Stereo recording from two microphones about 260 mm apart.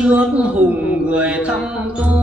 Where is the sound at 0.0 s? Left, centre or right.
Centre.